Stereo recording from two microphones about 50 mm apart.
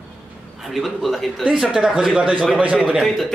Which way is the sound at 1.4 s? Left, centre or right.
Centre.